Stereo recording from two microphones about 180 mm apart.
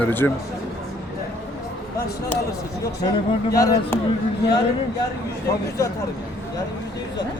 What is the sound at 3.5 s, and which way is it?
Speech, 20° left (ahead or behind).